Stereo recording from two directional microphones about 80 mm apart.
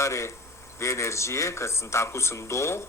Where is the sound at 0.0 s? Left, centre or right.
Left.